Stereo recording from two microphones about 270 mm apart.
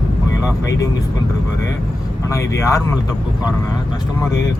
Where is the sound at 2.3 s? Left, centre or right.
Centre.